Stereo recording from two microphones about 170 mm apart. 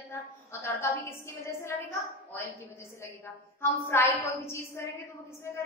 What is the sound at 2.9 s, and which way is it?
A woman's voice, 15° left (ahead or behind).